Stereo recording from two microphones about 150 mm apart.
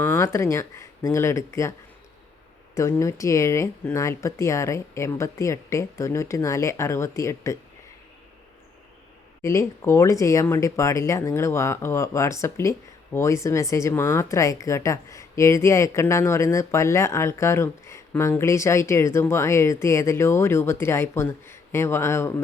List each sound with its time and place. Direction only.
0.0 s speech: 15° left (ahead or behind)
2.7 s speech: 20° left (ahead or behind)
9.4 s speech: 20° left (ahead or behind)